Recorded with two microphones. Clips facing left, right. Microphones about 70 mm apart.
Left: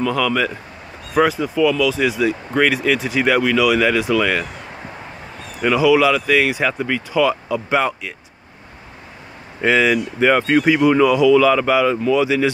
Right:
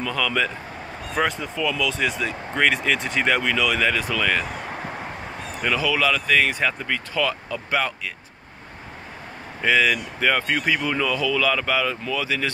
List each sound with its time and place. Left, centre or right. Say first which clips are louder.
0.0 s speech: left 5 dB; centre
5.6 s speech: left 9 dB; centre
9.6 s speech: left 4 dB; centre